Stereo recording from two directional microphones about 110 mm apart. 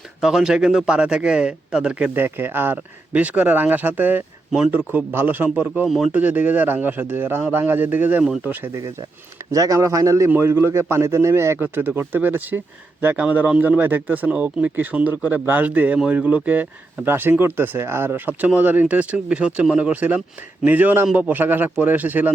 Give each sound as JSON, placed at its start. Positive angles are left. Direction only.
{"t": 0.2, "sound": "a man's voice", "side_deg": -5}